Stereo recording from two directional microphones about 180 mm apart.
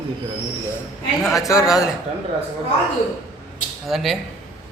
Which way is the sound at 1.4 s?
15° left (ahead or behind).